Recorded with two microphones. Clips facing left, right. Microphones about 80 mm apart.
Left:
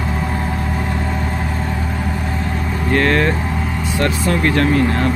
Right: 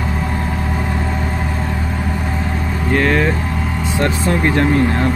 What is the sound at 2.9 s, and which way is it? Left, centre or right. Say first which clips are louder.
Speech: even; centre.